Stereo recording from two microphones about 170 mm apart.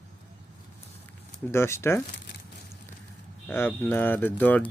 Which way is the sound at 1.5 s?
15° left (ahead or behind).